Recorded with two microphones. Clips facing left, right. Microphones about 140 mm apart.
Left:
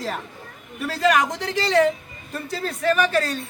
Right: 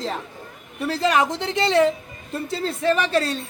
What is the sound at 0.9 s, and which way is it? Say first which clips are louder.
A man's voice: even; 25° right (ahead or behind).